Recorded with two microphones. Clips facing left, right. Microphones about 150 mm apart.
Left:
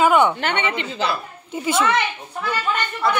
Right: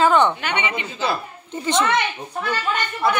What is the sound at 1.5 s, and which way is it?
Speech, 5° left (ahead or behind).